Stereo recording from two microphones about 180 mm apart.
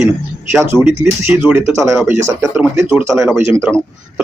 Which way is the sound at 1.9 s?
Centre (ahead or behind).